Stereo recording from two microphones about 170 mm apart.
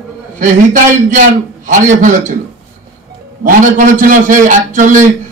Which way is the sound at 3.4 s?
50° right (ahead or behind).